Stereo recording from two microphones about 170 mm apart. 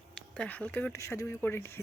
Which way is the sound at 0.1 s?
5° left (ahead or behind).